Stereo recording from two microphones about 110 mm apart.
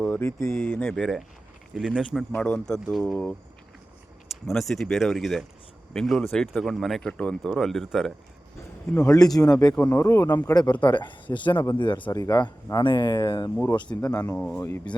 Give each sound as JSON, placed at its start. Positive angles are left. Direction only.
{"t": 0.0, "sound": "speech", "side_deg": 20}
{"t": 0.9, "sound": "speech", "side_deg": 5}
{"t": 4.4, "sound": "speech", "side_deg": 0}
{"t": 9.0, "sound": "speech", "side_deg": 35}
{"t": 9.4, "sound": "speech", "side_deg": 10}
{"t": 10.0, "sound": "speech", "side_deg": 25}
{"t": 10.5, "sound": "speech", "side_deg": 40}
{"t": 12.1, "sound": "speech", "side_deg": 35}
{"t": 13.9, "sound": "speech", "side_deg": 30}
{"t": 14.3, "sound": "speech", "side_deg": 10}